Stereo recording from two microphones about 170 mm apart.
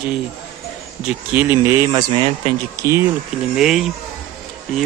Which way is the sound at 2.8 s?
15° right (ahead or behind).